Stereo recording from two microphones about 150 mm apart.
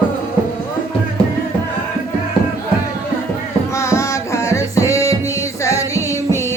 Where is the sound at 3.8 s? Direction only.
20° left (ahead or behind).